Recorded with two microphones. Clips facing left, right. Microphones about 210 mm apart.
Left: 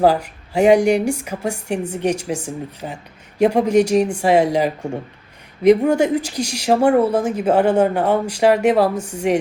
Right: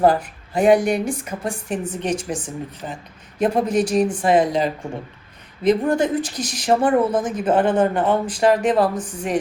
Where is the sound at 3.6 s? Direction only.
75° left (ahead or behind).